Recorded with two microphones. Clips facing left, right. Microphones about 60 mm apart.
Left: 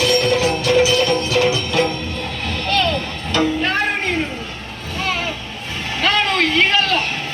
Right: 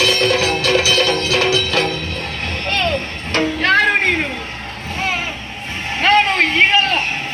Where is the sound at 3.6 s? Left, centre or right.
Right.